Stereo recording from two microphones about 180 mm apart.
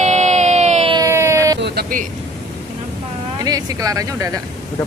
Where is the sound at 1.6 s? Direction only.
60° right (ahead or behind).